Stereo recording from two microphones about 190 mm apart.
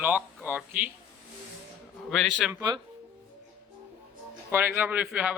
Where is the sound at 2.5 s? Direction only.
20° right (ahead or behind).